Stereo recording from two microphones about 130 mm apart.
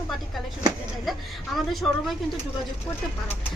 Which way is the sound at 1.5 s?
Centre (ahead or behind).